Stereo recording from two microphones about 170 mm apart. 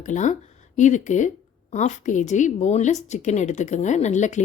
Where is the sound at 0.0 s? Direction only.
45° left (ahead or behind).